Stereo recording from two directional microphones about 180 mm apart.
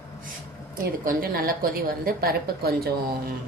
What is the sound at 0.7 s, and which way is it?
A woman's voice, 50° right (ahead or behind).